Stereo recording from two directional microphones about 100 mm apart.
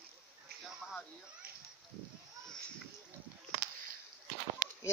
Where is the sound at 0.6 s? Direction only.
5° right (ahead or behind).